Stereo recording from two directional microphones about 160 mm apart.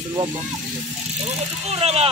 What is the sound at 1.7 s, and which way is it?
Vehicle, 40° right (ahead or behind).